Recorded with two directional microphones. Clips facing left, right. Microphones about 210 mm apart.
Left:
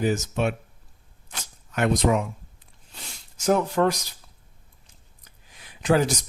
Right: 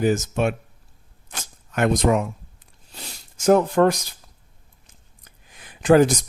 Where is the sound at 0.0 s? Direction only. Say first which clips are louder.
Right 3 dB; 50° right (ahead or behind).